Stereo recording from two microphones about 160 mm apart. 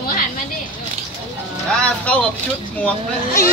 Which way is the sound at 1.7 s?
10° left (ahead or behind).